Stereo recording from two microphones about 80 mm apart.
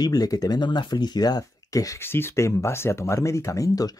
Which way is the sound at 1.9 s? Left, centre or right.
Left.